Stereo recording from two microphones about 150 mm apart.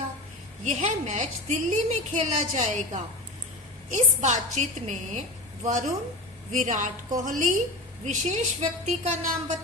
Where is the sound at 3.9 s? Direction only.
55° right (ahead or behind).